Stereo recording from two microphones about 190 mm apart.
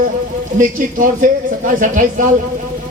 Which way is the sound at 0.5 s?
45° right (ahead or behind).